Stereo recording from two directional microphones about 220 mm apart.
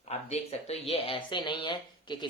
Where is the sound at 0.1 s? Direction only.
30° left (ahead or behind).